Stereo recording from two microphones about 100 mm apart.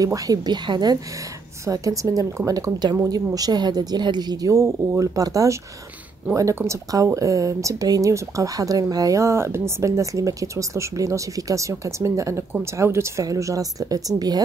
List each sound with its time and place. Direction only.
0.0 s speech: 40° right (ahead or behind)
1.7 s speech: 35° right (ahead or behind)